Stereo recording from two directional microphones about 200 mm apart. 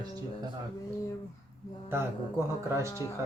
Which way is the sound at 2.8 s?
15° left (ahead or behind).